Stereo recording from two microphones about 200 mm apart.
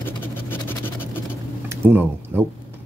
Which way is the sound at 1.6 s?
10° right (ahead or behind).